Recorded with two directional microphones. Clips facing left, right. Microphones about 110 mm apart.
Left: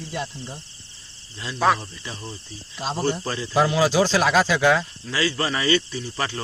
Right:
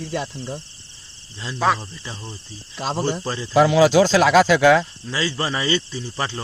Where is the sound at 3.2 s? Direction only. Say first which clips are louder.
Right 1 dB; 25° right (ahead or behind).